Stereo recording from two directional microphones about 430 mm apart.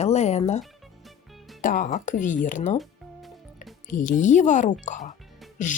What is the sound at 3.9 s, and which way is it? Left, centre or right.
A woman's voice, centre.